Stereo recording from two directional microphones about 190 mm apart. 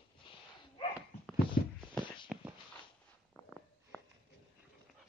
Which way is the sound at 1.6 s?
50° left (ahead or behind).